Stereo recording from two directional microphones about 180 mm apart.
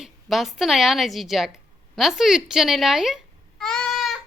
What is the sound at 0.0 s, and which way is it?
A woman's voice, centre (ahead or behind).